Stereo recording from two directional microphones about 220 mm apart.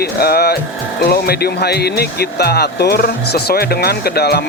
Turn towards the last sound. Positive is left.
turn(degrees=45)  # may be behind; listen again after turning